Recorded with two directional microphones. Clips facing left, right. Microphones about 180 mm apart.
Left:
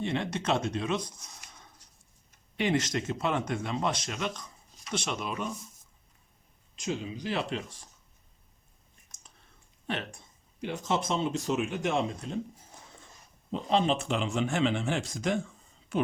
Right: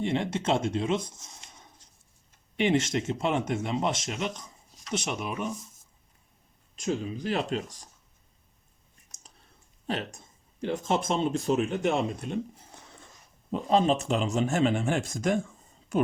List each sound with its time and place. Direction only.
0.0 s speech: 25° right (ahead or behind)
2.6 s speech: 25° right (ahead or behind)
6.7 s speech: 45° right (ahead or behind)
9.8 s speech: 40° right (ahead or behind)
10.8 s speech: 50° right (ahead or behind)
13.5 s speech: 45° right (ahead or behind)